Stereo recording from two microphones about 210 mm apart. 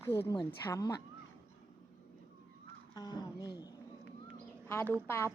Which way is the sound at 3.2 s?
20° left (ahead or behind).